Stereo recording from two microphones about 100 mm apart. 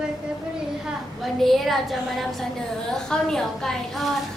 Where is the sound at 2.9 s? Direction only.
5° left (ahead or behind).